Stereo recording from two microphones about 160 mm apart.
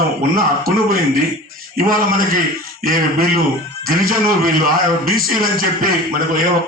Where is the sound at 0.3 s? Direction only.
65° right (ahead or behind).